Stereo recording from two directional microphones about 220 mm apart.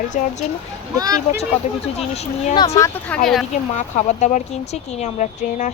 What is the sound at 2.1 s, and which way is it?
Speech, 30° left (ahead or behind).